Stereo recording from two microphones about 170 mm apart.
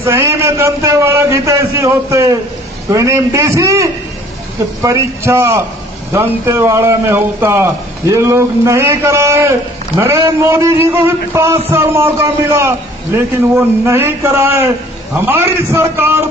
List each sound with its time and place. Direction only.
0.0 s a man's voice: 15° right (ahead or behind)